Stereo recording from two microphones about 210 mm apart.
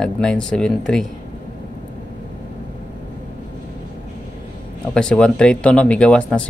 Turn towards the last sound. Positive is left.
turn(degrees=5)  # may be behind; listen again after turning